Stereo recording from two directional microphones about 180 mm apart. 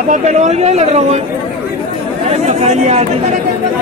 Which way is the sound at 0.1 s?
40° right (ahead or behind).